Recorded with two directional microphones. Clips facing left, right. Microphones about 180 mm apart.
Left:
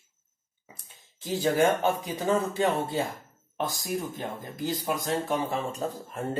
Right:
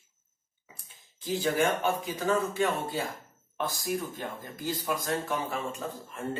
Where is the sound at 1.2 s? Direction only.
30° left (ahead or behind).